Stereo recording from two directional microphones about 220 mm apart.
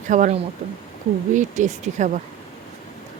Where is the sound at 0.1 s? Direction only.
35° right (ahead or behind).